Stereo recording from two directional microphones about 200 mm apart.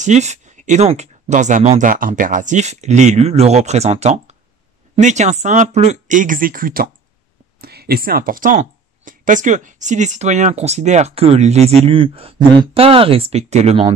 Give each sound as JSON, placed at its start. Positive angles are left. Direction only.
{"t": 0.0, "sound": "speech", "side_deg": -35}